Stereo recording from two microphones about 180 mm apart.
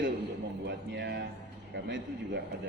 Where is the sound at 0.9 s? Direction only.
70° right (ahead or behind).